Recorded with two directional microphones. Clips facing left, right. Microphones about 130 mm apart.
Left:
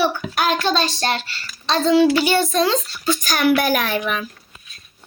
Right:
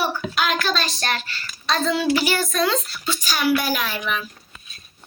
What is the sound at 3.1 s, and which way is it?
Speech, 50° left (ahead or behind).